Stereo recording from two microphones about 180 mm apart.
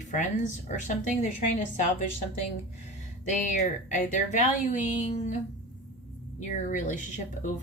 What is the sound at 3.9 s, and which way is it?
Speech, 45° left (ahead or behind).